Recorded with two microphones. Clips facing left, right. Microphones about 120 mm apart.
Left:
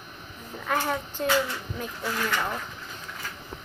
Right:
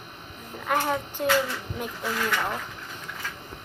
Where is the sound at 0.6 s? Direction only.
15° right (ahead or behind).